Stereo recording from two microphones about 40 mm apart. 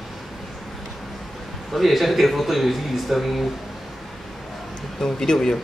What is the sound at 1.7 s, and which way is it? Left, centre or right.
Speech, centre.